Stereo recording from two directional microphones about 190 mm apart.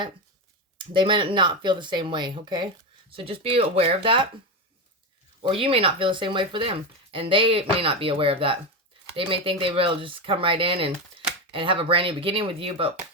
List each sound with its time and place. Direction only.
0.8 s speech: 25° right (ahead or behind)
5.4 s speech: 30° right (ahead or behind)